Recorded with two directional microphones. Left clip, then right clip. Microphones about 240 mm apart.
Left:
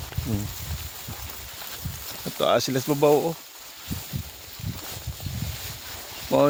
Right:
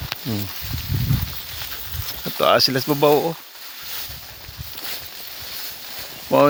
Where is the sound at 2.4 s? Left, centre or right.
Centre.